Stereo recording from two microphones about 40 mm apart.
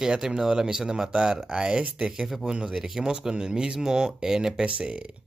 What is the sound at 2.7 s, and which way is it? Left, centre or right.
Speech, centre.